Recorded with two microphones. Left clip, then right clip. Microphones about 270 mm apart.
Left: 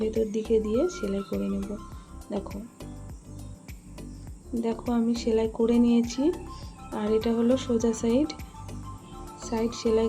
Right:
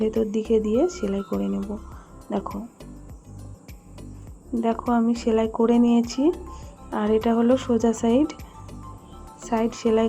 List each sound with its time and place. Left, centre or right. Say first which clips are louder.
0.0 s speech: right 3 dB; centre
4.5 s speech: right 6 dB; centre
9.4 s speech: right 5 dB; centre